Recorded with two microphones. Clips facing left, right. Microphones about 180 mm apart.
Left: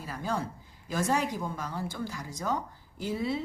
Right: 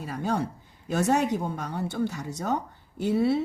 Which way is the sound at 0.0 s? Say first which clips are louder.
Right 5 dB; 65° right (ahead or behind).